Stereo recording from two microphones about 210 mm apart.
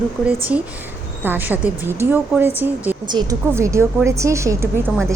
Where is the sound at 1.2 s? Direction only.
10° right (ahead or behind).